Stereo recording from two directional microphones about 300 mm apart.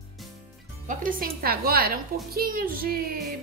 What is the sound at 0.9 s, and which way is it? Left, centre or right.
A woman's voice, right.